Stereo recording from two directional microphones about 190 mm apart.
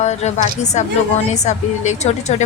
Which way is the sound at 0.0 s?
35° left (ahead or behind).